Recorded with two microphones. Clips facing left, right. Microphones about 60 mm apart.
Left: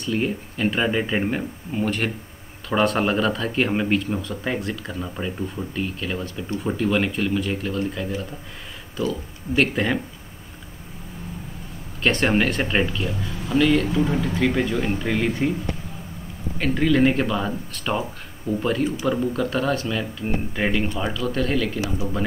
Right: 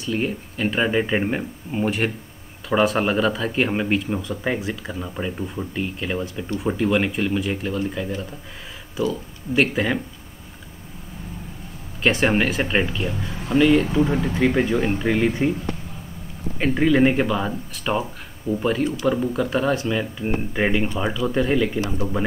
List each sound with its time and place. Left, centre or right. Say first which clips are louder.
0.0 s speech: even; centre
9.6 s speech: right 1 dB; centre
12.0 s speech: right 1 dB; centre
14.2 s speech: right 2 dB; centre
16.5 s speech: right 2 dB; centre